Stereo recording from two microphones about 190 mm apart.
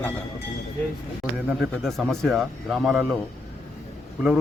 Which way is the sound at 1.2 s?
Centre (ahead or behind).